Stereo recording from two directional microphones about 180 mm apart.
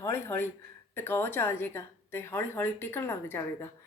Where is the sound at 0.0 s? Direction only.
15° left (ahead or behind).